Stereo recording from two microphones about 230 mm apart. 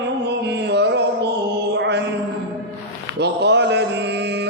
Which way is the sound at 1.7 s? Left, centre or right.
Right.